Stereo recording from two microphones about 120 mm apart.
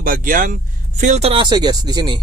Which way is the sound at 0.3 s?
90° right.